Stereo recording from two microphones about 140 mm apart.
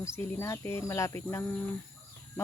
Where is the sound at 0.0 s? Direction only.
15° left (ahead or behind).